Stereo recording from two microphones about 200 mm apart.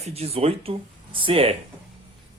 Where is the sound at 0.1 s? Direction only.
30° right (ahead or behind).